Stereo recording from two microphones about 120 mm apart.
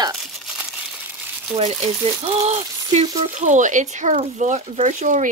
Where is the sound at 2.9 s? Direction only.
80° right.